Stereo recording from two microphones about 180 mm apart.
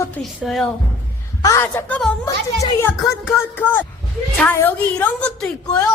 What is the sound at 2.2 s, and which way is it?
A woman's voice, 20° left (ahead or behind).